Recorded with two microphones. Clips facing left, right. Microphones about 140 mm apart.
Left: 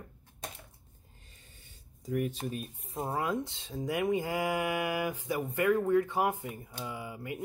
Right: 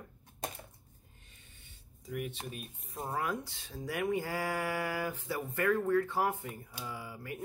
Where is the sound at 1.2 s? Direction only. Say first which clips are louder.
Left 2 dB; 35° left (ahead or behind).